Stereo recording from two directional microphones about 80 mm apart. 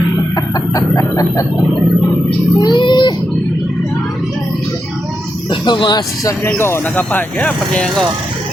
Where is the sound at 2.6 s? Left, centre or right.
Left.